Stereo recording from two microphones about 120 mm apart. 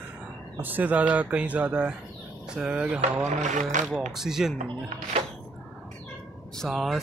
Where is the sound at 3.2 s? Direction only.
85° right.